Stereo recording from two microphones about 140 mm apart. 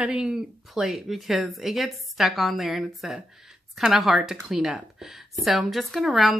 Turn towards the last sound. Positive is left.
turn(degrees=0)  # may be behind; listen again after turning